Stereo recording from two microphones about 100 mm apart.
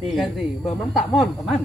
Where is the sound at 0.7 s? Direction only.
Centre (ahead or behind).